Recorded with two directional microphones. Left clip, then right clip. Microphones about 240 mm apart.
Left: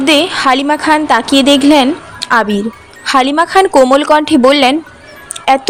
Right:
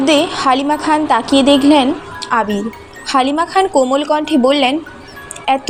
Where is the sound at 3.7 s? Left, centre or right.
Left.